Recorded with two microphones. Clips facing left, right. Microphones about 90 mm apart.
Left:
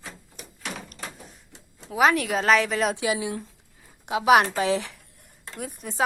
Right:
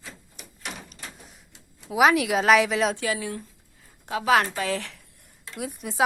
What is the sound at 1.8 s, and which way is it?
A woman's voice, 5° right (ahead or behind).